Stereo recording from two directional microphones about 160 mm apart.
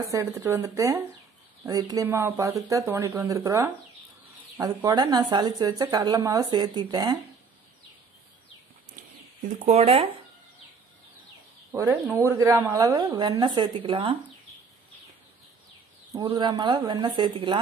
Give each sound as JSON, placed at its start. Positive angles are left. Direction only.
{"t": 0.1, "sound": "a woman's voice", "side_deg": -20}
{"t": 9.7, "sound": "speech", "side_deg": -40}
{"t": 11.7, "sound": "speech", "side_deg": -15}
{"t": 16.2, "sound": "a woman's voice", "side_deg": -30}